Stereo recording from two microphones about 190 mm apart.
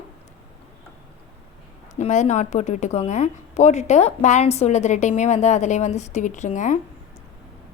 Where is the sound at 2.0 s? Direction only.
40° left (ahead or behind).